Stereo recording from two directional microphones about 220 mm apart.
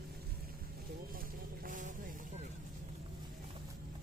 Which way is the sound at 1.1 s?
40° right (ahead or behind).